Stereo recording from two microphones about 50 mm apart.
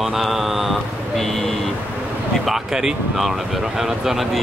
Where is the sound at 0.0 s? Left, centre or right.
Centre.